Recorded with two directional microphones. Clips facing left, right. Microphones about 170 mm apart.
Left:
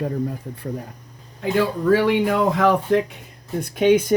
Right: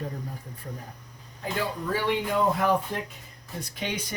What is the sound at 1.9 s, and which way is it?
Speech, 85° left.